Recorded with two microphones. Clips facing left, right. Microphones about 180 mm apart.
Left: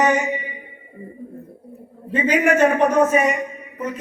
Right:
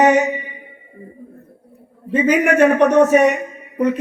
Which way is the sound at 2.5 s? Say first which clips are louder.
Right 5 dB; 70° right (ahead or behind).